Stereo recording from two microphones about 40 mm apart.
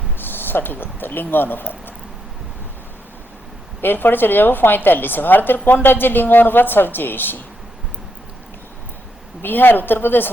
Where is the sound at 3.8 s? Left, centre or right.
Left.